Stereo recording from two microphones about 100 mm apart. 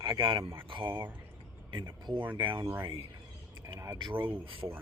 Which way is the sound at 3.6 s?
30° right (ahead or behind).